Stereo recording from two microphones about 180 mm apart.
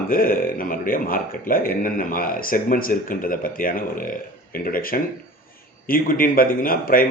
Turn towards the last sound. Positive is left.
turn(degrees=55)  # may be behind; listen again after turning